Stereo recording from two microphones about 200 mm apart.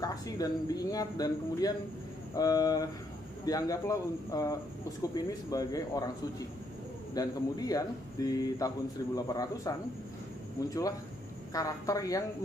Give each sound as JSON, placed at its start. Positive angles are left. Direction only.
{"t": 0.0, "sound": "a man's voice", "side_deg": 20}
{"t": 7.2, "sound": "a man's voice", "side_deg": 20}